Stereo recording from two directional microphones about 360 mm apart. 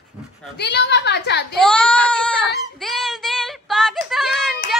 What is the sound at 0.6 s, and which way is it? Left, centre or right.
Speech, left.